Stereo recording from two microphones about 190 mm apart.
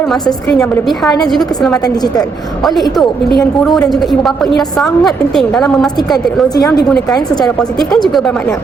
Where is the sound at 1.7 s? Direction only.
20° left (ahead or behind).